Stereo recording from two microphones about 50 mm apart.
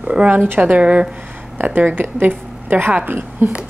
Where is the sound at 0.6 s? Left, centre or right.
Right.